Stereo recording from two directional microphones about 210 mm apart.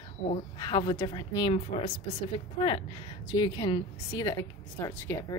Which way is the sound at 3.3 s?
20° left (ahead or behind).